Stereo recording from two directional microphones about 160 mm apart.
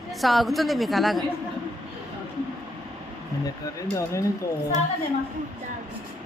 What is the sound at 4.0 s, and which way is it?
Speech, 20° left (ahead or behind).